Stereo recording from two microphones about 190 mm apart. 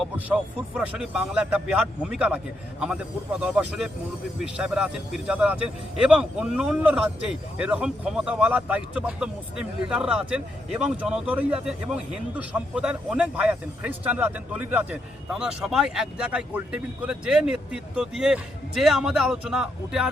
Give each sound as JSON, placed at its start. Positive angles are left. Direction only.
{"t": 0.8, "sound": "speech", "side_deg": -5}
{"t": 3.4, "sound": "speech", "side_deg": -5}